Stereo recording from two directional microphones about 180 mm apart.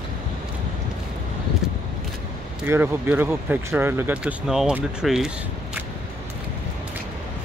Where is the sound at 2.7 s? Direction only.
10° right (ahead or behind).